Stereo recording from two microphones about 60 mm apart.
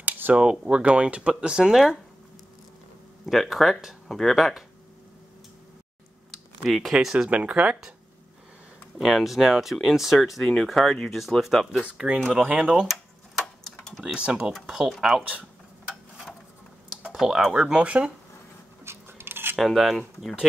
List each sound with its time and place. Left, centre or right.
0.3 s speech: centre
3.3 s speech: centre
6.6 s speech: centre
7.2 s speech: right
8.9 s speech: centre
10.4 s speech: centre
11.1 s speech: centre
11.8 s speech: centre
14.0 s speech: centre
14.9 s speech: centre
17.1 s speech: centre
17.8 s speech: right
18.9 s biting: right
19.5 s speech: centre